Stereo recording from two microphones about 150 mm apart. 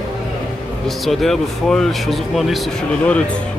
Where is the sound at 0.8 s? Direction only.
Centre (ahead or behind).